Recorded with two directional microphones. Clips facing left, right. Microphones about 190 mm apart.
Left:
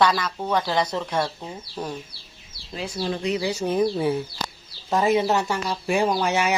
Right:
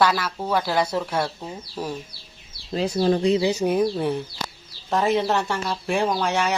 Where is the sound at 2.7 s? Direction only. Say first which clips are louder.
Right 7 dB; 40° right (ahead or behind).